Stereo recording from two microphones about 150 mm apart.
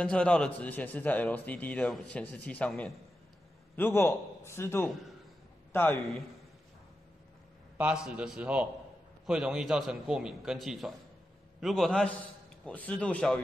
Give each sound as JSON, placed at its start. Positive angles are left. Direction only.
{"t": 0.0, "sound": "a man's voice", "side_deg": 5}
{"t": 4.8, "sound": "a man's voice", "side_deg": 0}
{"t": 5.7, "sound": "a man's voice", "side_deg": 15}
{"t": 7.7, "sound": "a man's voice", "side_deg": -5}